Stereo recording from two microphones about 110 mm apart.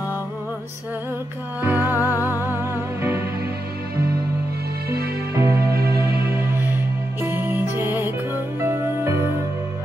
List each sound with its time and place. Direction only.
1.6 s music: 15° right (ahead or behind)
5.4 s music: 25° right (ahead or behind)